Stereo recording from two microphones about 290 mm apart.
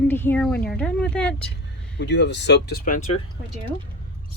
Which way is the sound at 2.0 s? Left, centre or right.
Left.